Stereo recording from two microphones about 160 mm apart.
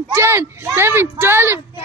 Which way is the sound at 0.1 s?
15° right (ahead or behind).